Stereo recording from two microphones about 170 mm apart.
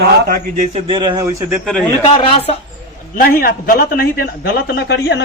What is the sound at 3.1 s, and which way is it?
A man's voice, 55° left (ahead or behind).